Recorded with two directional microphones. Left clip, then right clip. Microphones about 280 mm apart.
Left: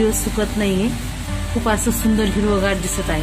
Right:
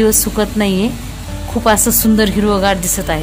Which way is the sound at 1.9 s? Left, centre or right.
Right.